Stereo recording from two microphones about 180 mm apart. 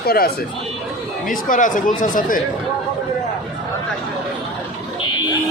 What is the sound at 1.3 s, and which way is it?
Speech, 45° left (ahead or behind).